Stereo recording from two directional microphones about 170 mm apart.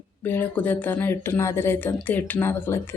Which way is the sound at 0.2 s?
10° left (ahead or behind).